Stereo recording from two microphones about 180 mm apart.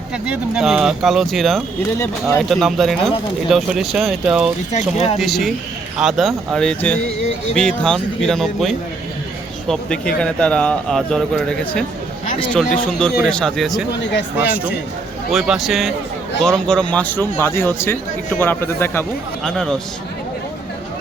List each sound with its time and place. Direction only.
0.3 s speech: 5° right (ahead or behind)
4.7 s speech: 35° left (ahead or behind)
5.1 s a man's voice: centre (ahead or behind)